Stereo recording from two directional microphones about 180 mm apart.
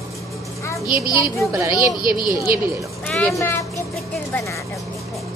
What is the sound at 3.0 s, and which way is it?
Speech, 5° left (ahead or behind).